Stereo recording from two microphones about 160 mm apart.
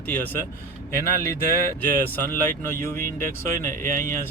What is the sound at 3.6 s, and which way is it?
Speech, 55° right (ahead or behind).